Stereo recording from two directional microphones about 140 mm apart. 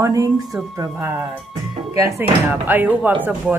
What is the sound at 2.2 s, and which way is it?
Speech, 15° right (ahead or behind).